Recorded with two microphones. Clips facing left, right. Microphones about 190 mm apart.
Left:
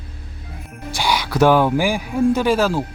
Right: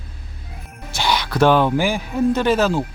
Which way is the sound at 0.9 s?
10° left (ahead or behind).